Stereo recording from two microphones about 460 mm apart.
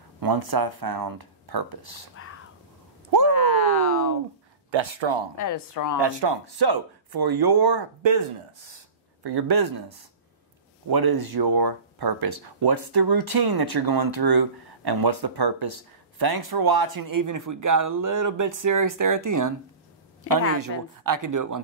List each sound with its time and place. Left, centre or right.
0.2 s speech: right
2.2 s a sound: left
4.6 s speech: right
5.4 s a woman's voice: left
5.9 s speech: right
9.2 s speech: right
20.5 s speech: right